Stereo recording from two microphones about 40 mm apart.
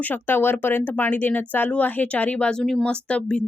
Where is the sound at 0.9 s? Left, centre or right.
Left.